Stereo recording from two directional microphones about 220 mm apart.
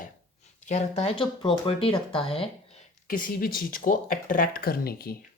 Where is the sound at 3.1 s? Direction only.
40° left (ahead or behind).